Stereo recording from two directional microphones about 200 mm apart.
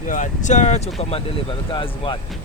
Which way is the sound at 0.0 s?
40° left (ahead or behind).